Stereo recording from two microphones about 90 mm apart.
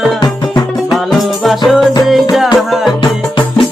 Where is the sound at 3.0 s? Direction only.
60° left (ahead or behind).